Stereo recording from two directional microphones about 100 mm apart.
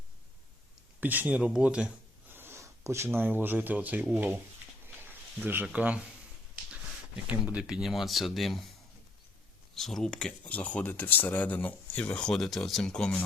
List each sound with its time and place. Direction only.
1.0 s speech: 15° right (ahead or behind)
4.9 s a sound: 20° right (ahead or behind)
5.6 s speech: 10° right (ahead or behind)
7.3 s speech: 10° right (ahead or behind)
9.7 s speech: 5° left (ahead or behind)